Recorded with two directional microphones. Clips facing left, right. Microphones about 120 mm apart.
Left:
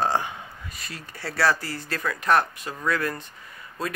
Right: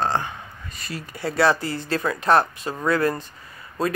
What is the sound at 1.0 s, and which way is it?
Speech, 15° right (ahead or behind).